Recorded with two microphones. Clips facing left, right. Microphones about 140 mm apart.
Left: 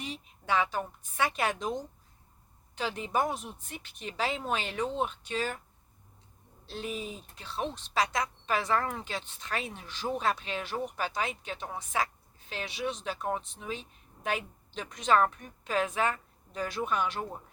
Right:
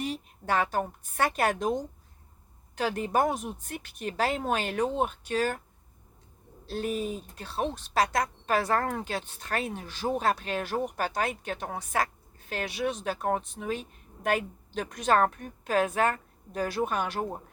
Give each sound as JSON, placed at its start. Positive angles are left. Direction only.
{"t": 0.0, "sound": "speech", "side_deg": -50}
{"t": 2.7, "sound": "speech", "side_deg": -50}
{"t": 6.7, "sound": "a woman's voice", "side_deg": -45}